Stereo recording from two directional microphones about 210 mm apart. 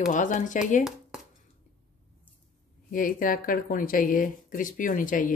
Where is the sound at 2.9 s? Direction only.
40° left (ahead or behind).